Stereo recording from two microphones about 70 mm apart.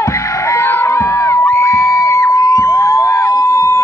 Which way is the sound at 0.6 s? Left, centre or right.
Left.